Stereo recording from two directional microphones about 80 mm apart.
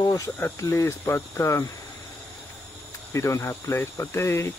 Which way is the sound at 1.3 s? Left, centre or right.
Left.